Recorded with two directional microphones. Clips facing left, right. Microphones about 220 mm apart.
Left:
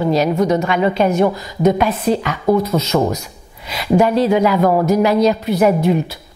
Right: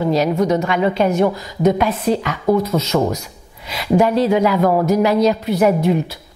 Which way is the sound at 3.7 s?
15° left (ahead or behind).